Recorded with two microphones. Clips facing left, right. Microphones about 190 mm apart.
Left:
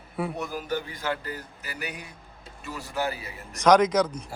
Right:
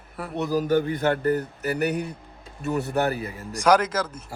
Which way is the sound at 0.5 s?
45° right (ahead or behind).